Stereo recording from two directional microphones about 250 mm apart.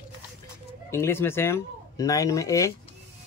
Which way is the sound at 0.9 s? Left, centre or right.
Centre.